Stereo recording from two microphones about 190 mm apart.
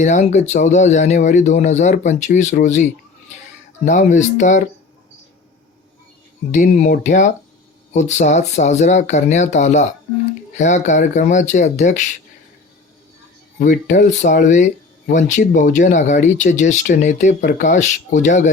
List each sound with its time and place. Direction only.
0.0 s speech: 35° left (ahead or behind)
3.8 s speech: 40° left (ahead or behind)
6.5 s speech: 40° left (ahead or behind)
13.6 s speech: 45° left (ahead or behind)